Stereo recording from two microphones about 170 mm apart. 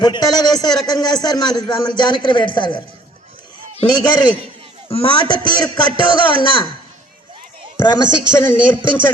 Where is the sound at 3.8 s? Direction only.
25° left (ahead or behind).